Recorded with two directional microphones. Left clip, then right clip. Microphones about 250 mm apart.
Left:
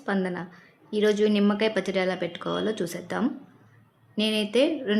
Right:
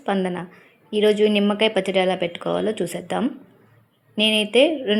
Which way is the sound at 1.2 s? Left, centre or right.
Centre.